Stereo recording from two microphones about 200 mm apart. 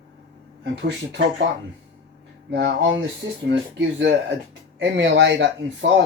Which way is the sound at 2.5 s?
60° right (ahead or behind).